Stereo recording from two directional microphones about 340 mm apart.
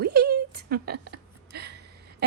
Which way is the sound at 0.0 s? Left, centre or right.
Right.